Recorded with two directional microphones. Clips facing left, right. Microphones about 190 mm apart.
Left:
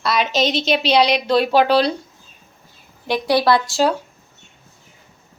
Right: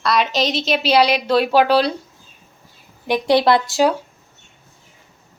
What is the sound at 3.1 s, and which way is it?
Speech, 20° right (ahead or behind).